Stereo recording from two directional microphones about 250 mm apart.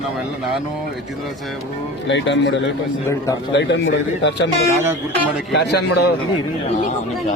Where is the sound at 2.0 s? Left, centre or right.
Left.